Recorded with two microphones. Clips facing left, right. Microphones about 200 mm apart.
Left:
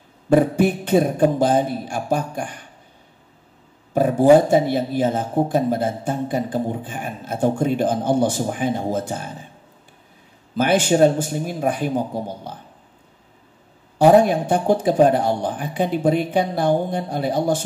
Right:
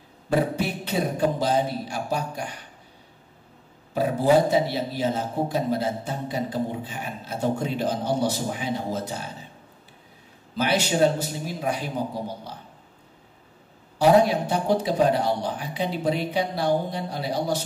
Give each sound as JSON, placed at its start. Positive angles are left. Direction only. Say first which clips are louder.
{"t": 0.3, "sound": "speech", "louder": "left 8 dB", "side_deg": 50}
{"t": 3.9, "sound": "speech", "louder": "left 7 dB", "side_deg": 50}
{"t": 10.5, "sound": "speech", "louder": "left 6 dB", "side_deg": 50}
{"t": 13.9, "sound": "speech", "louder": "left 5 dB", "side_deg": 50}